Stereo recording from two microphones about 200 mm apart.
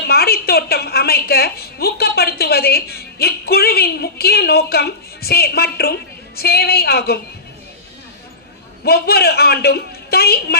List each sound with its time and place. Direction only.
0.1 s a woman's voice: 50° left (ahead or behind)
8.8 s a woman's voice: 50° left (ahead or behind)